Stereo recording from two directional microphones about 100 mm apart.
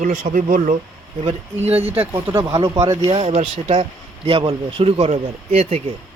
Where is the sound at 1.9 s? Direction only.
25° right (ahead or behind).